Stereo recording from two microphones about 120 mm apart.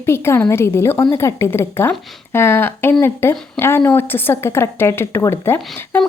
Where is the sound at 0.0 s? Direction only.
20° left (ahead or behind).